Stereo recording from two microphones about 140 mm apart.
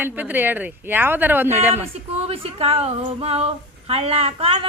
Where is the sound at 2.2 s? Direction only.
45° right (ahead or behind).